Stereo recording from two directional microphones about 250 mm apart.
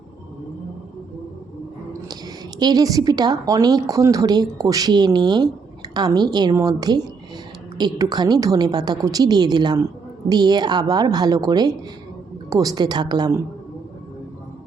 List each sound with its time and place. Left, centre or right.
2.6 s speech: centre